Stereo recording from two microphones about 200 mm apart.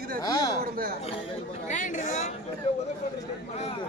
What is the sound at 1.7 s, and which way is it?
Speech, 40° left (ahead or behind).